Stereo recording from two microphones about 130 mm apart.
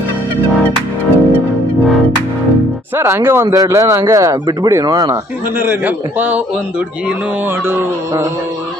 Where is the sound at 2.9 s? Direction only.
20° right (ahead or behind).